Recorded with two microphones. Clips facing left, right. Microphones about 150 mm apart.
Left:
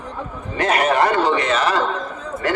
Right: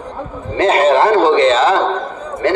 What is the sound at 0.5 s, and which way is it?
A man's voice, 25° right (ahead or behind).